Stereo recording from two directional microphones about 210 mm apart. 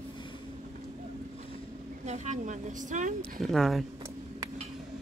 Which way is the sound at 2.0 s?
35° right (ahead or behind).